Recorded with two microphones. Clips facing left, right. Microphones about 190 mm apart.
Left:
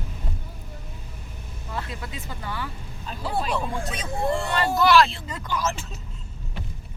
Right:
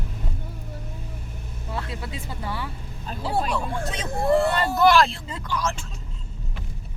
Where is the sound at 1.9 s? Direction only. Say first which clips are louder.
Right 2 dB; 30° right (ahead or behind).